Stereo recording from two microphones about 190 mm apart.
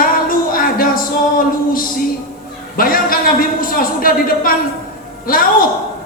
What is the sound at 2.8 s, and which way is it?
A woman's voice, 50° left (ahead or behind).